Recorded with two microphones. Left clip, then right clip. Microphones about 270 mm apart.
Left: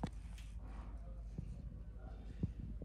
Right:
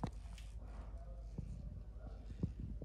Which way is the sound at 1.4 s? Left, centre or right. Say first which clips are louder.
Even; left.